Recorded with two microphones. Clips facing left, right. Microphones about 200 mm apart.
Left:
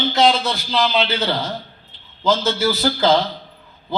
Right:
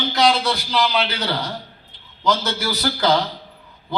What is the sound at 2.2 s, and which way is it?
Speech, 25° left (ahead or behind).